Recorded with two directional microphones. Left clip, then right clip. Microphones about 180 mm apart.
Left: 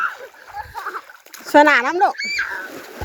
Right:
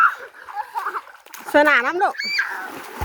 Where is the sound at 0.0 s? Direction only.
5° right (ahead or behind).